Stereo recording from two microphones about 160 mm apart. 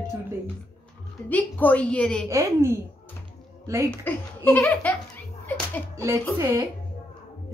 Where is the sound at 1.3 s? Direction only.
10° left (ahead or behind).